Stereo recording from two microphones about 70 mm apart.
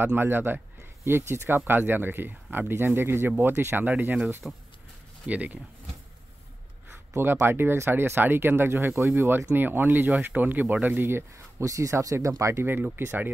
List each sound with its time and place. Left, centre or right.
0.0 s speech: right
4.4 s speech: centre
7.2 s speech: right
11.6 s speech: right
12.6 s speech: right